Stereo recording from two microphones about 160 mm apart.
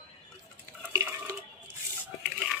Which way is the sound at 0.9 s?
20° right (ahead or behind).